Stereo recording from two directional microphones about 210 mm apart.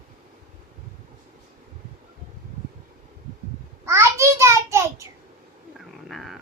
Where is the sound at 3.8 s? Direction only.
15° right (ahead or behind).